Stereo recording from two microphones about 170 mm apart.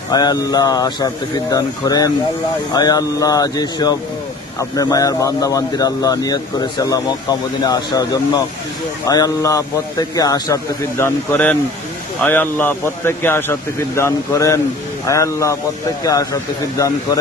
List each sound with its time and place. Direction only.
0.1 s a man's voice: 25° left (ahead or behind)